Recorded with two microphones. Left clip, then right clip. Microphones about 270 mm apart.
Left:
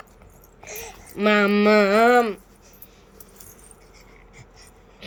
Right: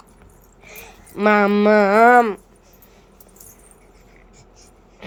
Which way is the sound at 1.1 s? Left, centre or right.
Centre.